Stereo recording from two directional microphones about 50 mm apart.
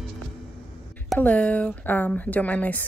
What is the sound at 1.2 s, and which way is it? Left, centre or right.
A woman's voice, left.